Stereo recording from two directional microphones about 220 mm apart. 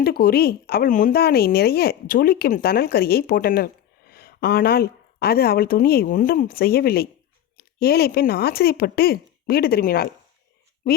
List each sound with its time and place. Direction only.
0.0 s speech: 45° left (ahead or behind)